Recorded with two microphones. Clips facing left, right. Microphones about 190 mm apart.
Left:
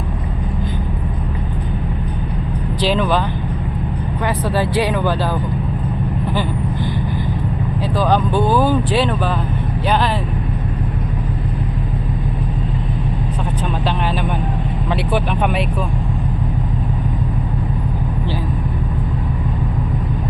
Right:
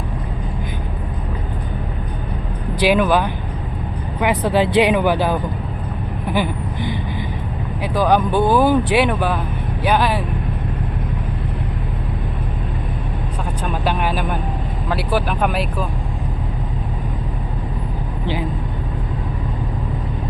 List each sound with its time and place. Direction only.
2.8 s speech: 10° right (ahead or behind)
7.9 s speech: 15° right (ahead or behind)
13.8 s vehicle: 10° right (ahead or behind)
14.8 s speech: 5° right (ahead or behind)